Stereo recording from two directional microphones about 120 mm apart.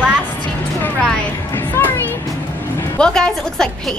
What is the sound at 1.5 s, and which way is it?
Music, 20° left (ahead or behind).